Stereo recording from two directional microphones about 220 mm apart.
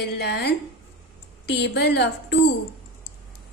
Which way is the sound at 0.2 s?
50° left (ahead or behind).